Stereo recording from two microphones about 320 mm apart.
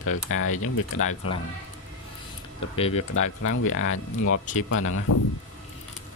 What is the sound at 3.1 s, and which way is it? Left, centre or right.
Speech, left.